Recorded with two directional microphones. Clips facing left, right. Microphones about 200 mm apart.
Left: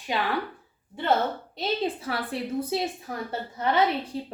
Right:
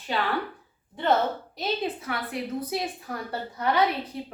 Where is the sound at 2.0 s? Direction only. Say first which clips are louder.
Left 1 dB; 30° left (ahead or behind).